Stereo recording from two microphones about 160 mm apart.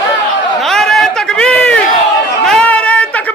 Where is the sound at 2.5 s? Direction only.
5° left (ahead or behind).